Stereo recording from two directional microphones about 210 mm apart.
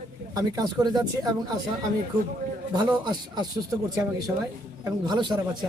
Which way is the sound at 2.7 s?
20° right (ahead or behind).